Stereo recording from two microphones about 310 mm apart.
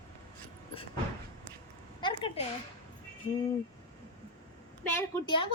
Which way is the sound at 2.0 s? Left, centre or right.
Centre.